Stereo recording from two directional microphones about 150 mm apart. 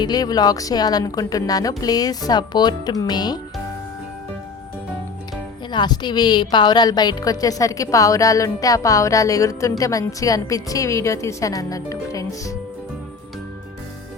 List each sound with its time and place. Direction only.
0.0 s a woman's voice: 25° left (ahead or behind)
5.7 s a woman's voice: 30° left (ahead or behind)